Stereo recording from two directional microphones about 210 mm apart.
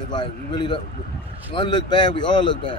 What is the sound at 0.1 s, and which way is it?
Speech, 20° left (ahead or behind).